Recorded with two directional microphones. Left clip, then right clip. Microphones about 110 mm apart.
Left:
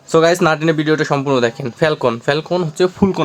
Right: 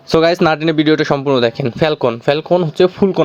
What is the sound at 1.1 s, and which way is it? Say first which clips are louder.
Speech: right 2 dB; 30° right (ahead or behind).